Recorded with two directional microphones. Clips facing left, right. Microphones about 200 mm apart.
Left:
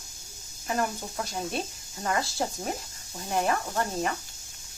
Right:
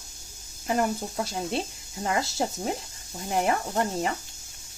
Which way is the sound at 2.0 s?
25° right (ahead or behind).